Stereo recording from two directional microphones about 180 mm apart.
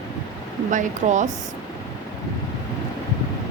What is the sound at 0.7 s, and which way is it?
Speech, 45° right (ahead or behind).